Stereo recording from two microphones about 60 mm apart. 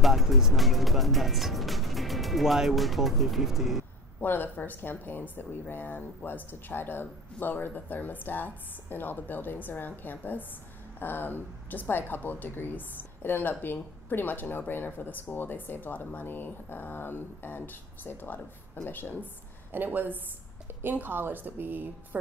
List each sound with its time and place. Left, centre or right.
0.0 s speech: centre
4.2 s a woman's voice: left
19.7 s a woman's voice: right